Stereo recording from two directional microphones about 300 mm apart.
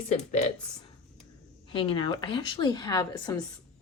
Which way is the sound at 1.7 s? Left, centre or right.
Centre.